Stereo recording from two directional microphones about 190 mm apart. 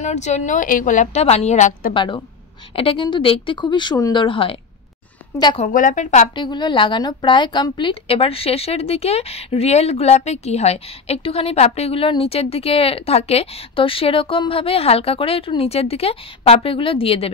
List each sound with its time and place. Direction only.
0.0 s a woman's voice: 40° left (ahead or behind)
2.0 s a woman's voice: 25° left (ahead or behind)
5.6 s a woman's voice: 45° left (ahead or behind)
6.3 s a woman's voice: 25° left (ahead or behind)